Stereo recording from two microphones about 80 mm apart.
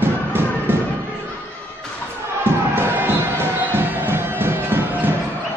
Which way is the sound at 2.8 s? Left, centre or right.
Right.